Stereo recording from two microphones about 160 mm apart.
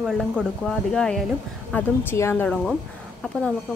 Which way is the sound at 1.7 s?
15° left (ahead or behind).